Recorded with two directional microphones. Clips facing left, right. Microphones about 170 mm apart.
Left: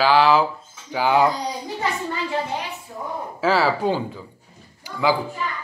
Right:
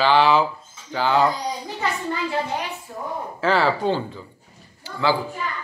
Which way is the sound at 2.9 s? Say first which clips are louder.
Even; 5° left (ahead or behind).